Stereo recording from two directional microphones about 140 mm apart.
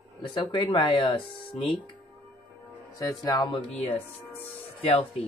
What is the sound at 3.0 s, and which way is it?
Speech, 25° left (ahead or behind).